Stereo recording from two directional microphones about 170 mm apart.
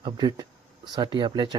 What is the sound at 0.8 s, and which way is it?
Speech, 25° right (ahead or behind).